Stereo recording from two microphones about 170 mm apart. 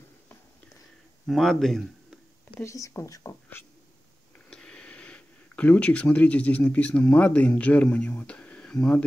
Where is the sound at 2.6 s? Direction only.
15° left (ahead or behind).